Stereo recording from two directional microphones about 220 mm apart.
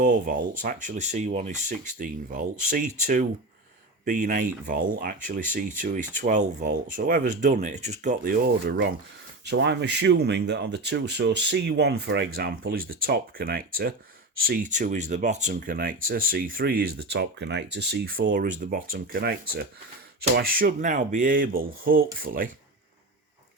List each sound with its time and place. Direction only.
0.0 s speech: 40° right (ahead or behind)
9.5 s speech: 55° right (ahead or behind)